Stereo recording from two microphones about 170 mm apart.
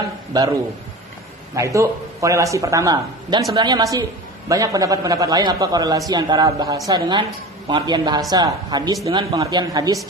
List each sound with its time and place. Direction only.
0.3 s a man's voice: 20° right (ahead or behind)